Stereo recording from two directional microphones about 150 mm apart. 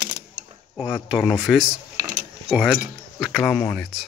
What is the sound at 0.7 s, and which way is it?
Speech, 5° right (ahead or behind).